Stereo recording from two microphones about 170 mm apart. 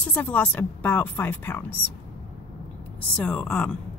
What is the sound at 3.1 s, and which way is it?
Speech, 5° left (ahead or behind).